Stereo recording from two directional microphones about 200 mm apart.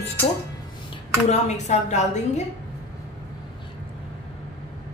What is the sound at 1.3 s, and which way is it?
A woman's voice, 35° left (ahead or behind).